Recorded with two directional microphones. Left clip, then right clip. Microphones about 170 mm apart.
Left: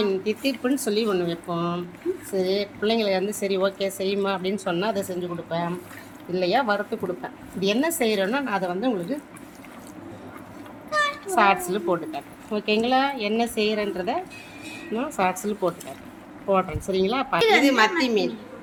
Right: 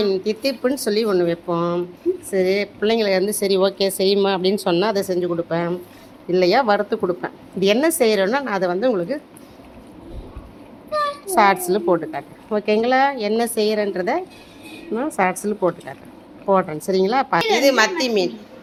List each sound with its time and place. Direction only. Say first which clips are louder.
0.0 s a woman's voice: right 4 dB; 35° right (ahead or behind)
11.3 s a woman's voice: right 4 dB; 35° right (ahead or behind)
14.9 s speech: right 4 dB; 20° right (ahead or behind)
16.5 s a woman's voice: right 5 dB; 30° right (ahead or behind)